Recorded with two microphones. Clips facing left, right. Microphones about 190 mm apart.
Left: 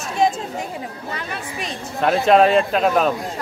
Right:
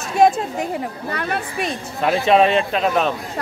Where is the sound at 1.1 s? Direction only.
60° right (ahead or behind).